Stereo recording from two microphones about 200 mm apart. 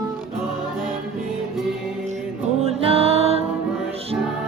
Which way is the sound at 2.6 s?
30° right (ahead or behind).